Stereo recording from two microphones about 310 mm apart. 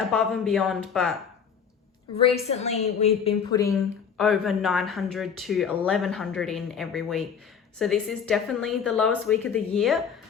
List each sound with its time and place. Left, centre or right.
0.1 s speech: centre
2.1 s a woman's voice: centre
4.2 s speech: centre